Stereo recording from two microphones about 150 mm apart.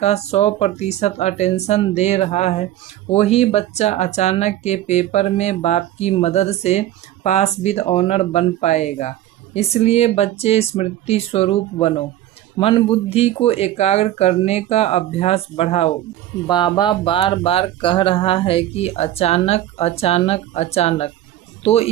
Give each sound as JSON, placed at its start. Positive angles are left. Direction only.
{"t": 0.0, "sound": "speech", "side_deg": 45}
{"t": 16.5, "sound": "speech", "side_deg": 30}